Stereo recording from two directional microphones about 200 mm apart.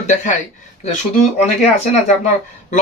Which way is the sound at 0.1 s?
40° left (ahead or behind).